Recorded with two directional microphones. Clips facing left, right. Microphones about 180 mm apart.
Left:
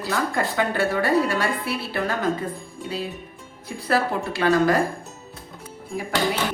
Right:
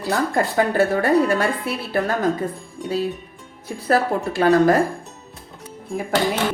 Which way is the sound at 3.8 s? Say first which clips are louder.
Right 3 dB; 40° right (ahead or behind).